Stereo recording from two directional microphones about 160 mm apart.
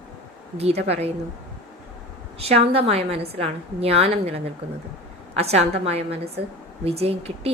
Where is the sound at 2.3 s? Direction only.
40° right (ahead or behind).